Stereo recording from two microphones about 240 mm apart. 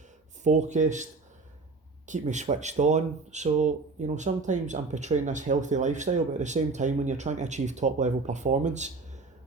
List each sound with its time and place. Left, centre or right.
0.4 s speech: right
2.0 s speech: right